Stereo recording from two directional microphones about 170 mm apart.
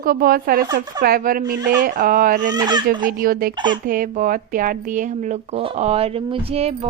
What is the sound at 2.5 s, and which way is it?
Speech, 25° right (ahead or behind).